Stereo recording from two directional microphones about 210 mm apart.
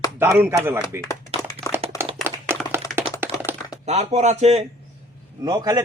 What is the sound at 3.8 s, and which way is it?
Speech, 30° right (ahead or behind).